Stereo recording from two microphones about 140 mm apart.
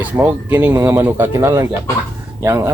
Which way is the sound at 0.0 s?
15° right (ahead or behind).